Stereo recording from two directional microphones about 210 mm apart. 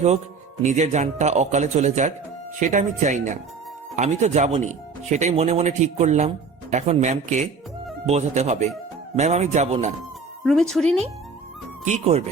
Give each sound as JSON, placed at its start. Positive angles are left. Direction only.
{"t": 0.6, "sound": "speech", "side_deg": -35}
{"t": 10.4, "sound": "speech", "side_deg": 0}
{"t": 11.9, "sound": "speech", "side_deg": -30}